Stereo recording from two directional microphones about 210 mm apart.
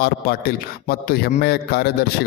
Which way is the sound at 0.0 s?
45° left (ahead or behind).